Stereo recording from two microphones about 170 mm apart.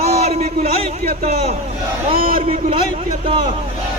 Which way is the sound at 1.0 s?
55° right (ahead or behind).